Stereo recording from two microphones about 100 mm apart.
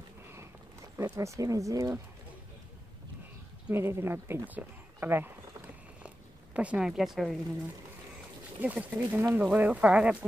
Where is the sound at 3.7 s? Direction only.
25° right (ahead or behind).